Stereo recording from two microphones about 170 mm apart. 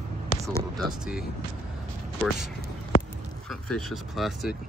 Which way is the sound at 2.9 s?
60° left (ahead or behind).